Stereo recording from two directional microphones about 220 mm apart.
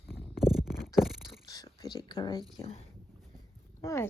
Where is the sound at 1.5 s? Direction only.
15° left (ahead or behind).